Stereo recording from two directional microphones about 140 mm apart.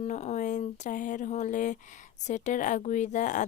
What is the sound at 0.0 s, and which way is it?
Speech, 55° left (ahead or behind).